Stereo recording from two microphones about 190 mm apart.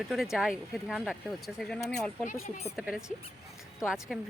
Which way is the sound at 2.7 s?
5° right (ahead or behind).